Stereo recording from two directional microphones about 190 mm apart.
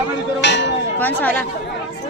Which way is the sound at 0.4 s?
65° left (ahead or behind).